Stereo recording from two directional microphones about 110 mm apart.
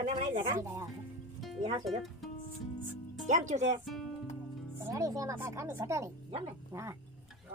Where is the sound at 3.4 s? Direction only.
90° right.